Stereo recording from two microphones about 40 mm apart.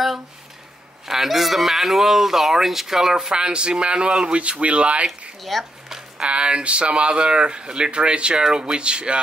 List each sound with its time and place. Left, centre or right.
1.0 s speech: centre; by 5.0 s right
5.4 s speech: centre
5.9 s a sound: centre
6.2 s speech: right
8.5 s speech: centre
8.7 s speech: right